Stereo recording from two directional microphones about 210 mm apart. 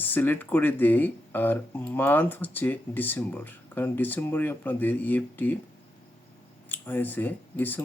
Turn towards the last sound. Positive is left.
turn(degrees=10)  # may be behind; listen again after turning